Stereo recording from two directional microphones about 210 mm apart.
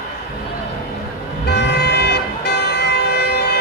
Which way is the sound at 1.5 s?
50° left (ahead or behind).